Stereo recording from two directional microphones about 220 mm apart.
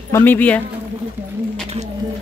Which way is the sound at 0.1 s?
10° left (ahead or behind).